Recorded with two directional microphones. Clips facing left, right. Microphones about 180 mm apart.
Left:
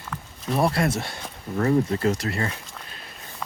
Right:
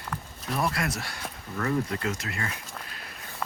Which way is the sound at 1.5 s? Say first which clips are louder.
Left 7 dB; 30° left (ahead or behind).